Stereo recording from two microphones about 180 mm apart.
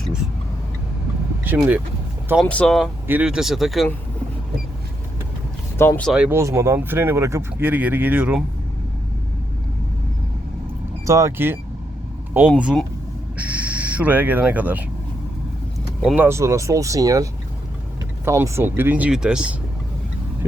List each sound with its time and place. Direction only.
1.5 s speech: 10° right (ahead or behind)
2.5 s speech: 5° left (ahead or behind)
5.7 s speech: 15° left (ahead or behind)
6.1 s speech: 5° right (ahead or behind)
6.4 s speech: 15° right (ahead or behind)
11.0 s speech: 15° right (ahead or behind)
16.0 s speech: 10° right (ahead or behind)
18.3 s speech: 15° right (ahead or behind)